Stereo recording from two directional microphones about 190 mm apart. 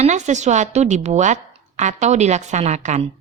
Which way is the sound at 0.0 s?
40° right (ahead or behind).